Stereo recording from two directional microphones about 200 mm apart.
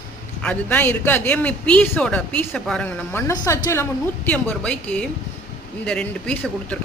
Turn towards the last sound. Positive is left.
turn(degrees=5)  # may be behind; listen again after turning